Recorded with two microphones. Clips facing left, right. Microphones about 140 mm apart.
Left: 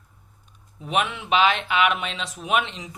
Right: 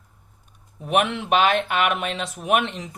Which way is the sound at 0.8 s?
55° right (ahead or behind).